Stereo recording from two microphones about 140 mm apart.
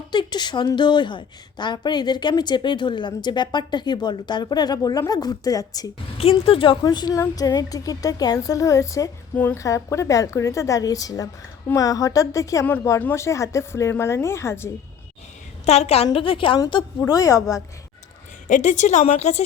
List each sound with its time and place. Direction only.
0.1 s a woman's voice: 30° left (ahead or behind)
6.1 s a woman's voice: 45° left (ahead or behind)
6.8 s a woman's voice: 30° left (ahead or behind)
15.6 s a woman's voice: 50° left (ahead or behind); by 17.6 s 25° left (ahead or behind)
18.4 s a woman's voice: 60° left (ahead or behind)